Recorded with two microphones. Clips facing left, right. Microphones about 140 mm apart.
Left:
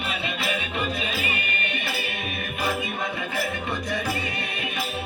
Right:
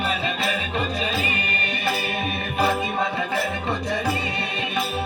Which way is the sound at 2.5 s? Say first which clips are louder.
Right 6 dB; 35° right (ahead or behind).